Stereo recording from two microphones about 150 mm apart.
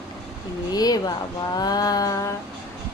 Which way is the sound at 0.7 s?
25° left (ahead or behind).